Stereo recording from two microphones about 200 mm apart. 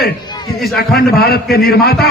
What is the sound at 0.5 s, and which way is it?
Speech, centre (ahead or behind).